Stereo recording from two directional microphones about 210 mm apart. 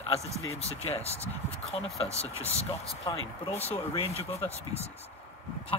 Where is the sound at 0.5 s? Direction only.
30° left (ahead or behind).